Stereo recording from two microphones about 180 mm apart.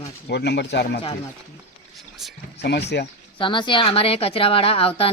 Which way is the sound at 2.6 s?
70° left (ahead or behind).